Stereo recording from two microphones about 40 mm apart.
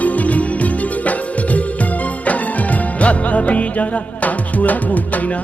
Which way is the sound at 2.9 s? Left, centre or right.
Left.